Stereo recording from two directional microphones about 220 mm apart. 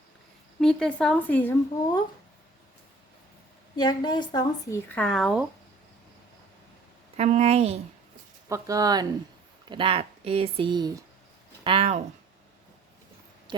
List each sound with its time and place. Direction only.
0.6 s speech: 5° left (ahead or behind)
3.8 s a woman's voice: 20° left (ahead or behind)
4.9 s speech: 5° left (ahead or behind)
7.2 s speech: 30° right (ahead or behind)
8.4 s speech: 15° right (ahead or behind)
13.5 s a sound: 20° right (ahead or behind)